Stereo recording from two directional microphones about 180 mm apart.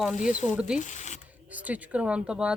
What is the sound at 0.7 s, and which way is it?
Speech, 40° left (ahead or behind).